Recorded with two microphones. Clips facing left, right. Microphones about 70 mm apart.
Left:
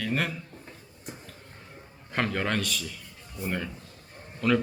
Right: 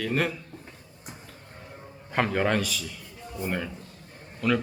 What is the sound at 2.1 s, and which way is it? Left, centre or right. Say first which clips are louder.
Speech: right 4 dB; centre.